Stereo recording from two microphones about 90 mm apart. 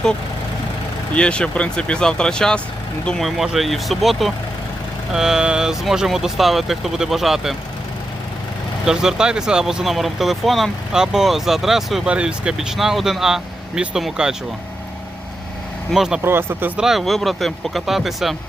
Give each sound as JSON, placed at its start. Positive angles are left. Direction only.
{"t": 1.1, "sound": "speech", "side_deg": 10}
{"t": 8.9, "sound": "speech", "side_deg": -5}
{"t": 15.9, "sound": "speech", "side_deg": -5}
{"t": 16.2, "sound": "speech", "side_deg": -25}
{"t": 16.7, "sound": "speech", "side_deg": -5}